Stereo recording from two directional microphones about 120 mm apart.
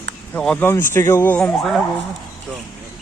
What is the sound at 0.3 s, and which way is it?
Speech, 10° left (ahead or behind).